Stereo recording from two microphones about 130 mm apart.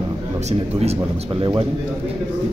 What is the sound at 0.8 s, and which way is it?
Speech, 55° right (ahead or behind).